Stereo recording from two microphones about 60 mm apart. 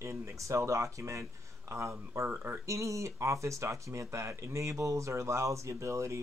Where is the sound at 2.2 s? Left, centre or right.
Right.